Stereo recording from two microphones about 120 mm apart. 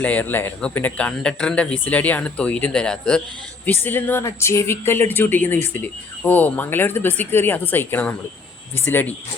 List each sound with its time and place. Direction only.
0.0 s speech: 10° left (ahead or behind)